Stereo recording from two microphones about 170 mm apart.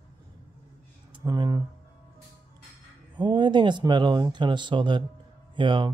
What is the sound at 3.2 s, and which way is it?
Speech, 25° right (ahead or behind).